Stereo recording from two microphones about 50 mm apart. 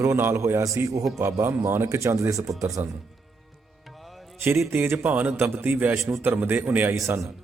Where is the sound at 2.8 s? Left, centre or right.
Right.